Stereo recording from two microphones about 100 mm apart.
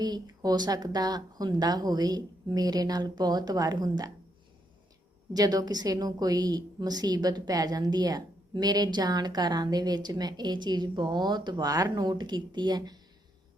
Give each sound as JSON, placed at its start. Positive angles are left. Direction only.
{"t": 0.0, "sound": "speech", "side_deg": -45}
{"t": 5.3, "sound": "a woman's voice", "side_deg": -40}